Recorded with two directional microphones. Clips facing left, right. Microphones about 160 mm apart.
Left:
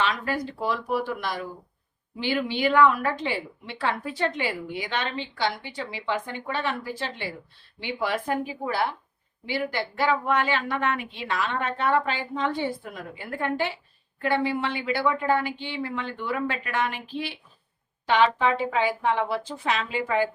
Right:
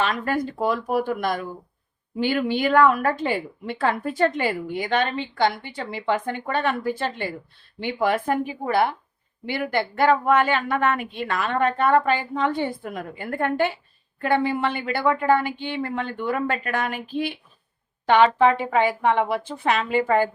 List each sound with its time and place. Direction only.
0.0 s a woman's voice: 50° right (ahead or behind)